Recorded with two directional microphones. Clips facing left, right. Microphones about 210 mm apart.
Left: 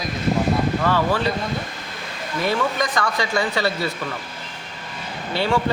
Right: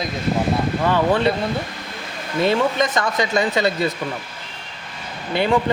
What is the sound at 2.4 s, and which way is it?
Speech, 25° right (ahead or behind).